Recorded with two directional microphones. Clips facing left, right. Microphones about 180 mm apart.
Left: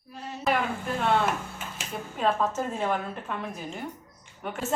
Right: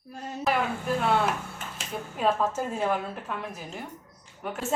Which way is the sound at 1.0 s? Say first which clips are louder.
Left 2 dB; 5° left (ahead or behind).